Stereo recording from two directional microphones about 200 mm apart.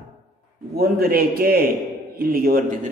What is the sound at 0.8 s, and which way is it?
A man's voice, 50° right (ahead or behind).